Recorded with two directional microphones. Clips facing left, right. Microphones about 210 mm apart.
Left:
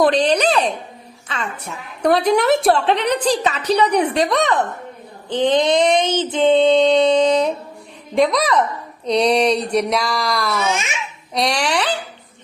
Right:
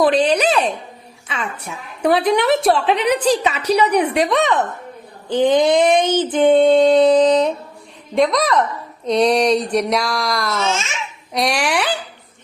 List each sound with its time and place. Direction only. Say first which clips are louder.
0.0 s a woman's voice: even; 5° right (ahead or behind)
3.9 s child singing: right 1 dB; 30° left (ahead or behind)
4.3 s a woman's voice: right 1 dB; centre (ahead or behind)
6.0 s child singing: right 2 dB; 20° left (ahead or behind)
6.4 s a woman's voice: right 1 dB; 5° right (ahead or behind)
10.6 s speech: even; 15° left (ahead or behind)
11.4 s a woman's voice: right 1 dB; 5° right (ahead or behind)